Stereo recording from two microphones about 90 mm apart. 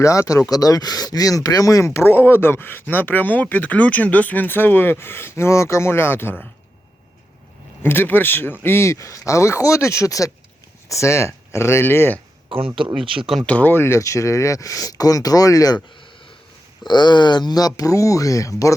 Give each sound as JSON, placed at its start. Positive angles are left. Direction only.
{"t": 0.0, "sound": "speech", "side_deg": 35}
{"t": 7.8, "sound": "speech", "side_deg": 25}
{"t": 12.5, "sound": "speech", "side_deg": -85}
{"t": 13.4, "sound": "speech", "side_deg": 15}
{"t": 16.8, "sound": "speech", "side_deg": 55}